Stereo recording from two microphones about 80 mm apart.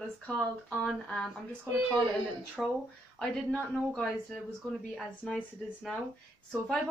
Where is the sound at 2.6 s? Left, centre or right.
Centre.